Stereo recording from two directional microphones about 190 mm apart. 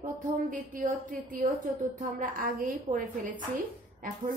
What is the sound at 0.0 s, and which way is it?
A woman's voice, 45° right (ahead or behind).